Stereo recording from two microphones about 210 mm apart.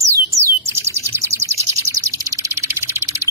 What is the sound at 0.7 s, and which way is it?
Bird, 10° right (ahead or behind).